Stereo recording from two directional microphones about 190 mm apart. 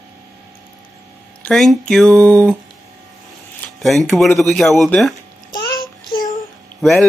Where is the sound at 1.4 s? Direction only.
Centre (ahead or behind).